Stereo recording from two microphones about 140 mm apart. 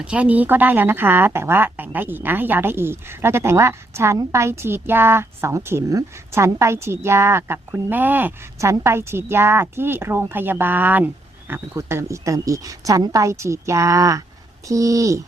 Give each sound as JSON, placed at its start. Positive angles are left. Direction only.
{"t": 0.0, "sound": "a woman's voice", "side_deg": -10}